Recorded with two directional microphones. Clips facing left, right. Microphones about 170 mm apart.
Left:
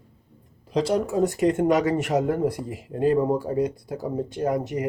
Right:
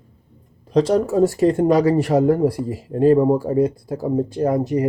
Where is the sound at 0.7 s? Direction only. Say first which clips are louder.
Right 6 dB; 40° right (ahead or behind).